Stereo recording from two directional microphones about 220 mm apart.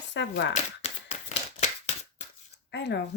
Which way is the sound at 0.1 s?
55° left (ahead or behind).